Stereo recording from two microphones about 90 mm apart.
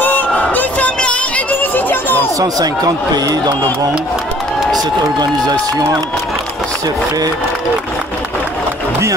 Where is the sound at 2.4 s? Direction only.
45° right (ahead or behind).